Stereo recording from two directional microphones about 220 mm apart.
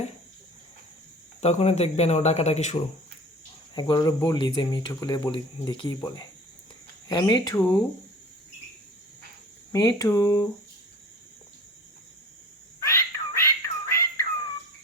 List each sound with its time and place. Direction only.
1.4 s speech: 30° left (ahead or behind)
3.8 s speech: 20° left (ahead or behind)
9.7 s speech: 15° left (ahead or behind)
12.8 s music: 15° left (ahead or behind)